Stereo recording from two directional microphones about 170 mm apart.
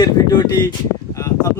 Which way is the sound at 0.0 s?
25° left (ahead or behind).